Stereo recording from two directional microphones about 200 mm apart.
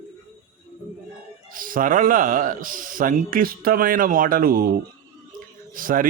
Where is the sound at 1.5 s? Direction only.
45° right (ahead or behind).